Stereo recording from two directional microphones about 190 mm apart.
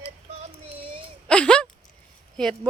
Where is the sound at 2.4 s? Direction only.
5° left (ahead or behind).